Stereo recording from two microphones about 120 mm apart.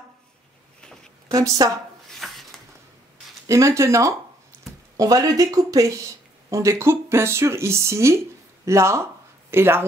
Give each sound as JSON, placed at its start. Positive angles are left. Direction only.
{"t": 1.3, "sound": "speech", "side_deg": -30}
{"t": 2.1, "sound": "a sound", "side_deg": 0}
{"t": 3.4, "sound": "speech", "side_deg": -25}